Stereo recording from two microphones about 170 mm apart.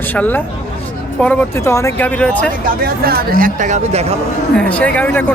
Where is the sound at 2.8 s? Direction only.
65° right (ahead or behind); by 4.0 s 45° right (ahead or behind).